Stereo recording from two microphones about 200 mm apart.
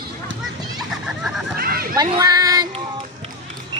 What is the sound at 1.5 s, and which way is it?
Children playing, 50° right (ahead or behind).